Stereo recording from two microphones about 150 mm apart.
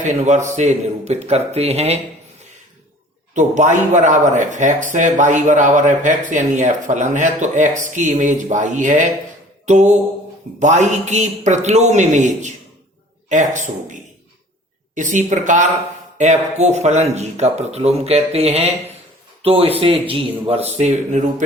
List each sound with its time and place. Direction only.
0.0 s speech: 50° right (ahead or behind)
3.3 s speech: 55° right (ahead or behind)